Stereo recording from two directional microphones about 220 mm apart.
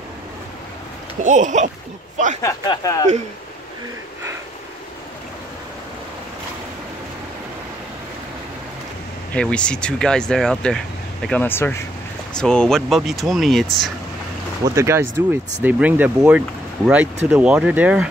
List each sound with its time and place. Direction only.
1.2 s speech: 35° right (ahead or behind)
2.4 s speech: 20° left (ahead or behind)
9.3 s speech: 5° left (ahead or behind)
14.6 s speech: 15° right (ahead or behind)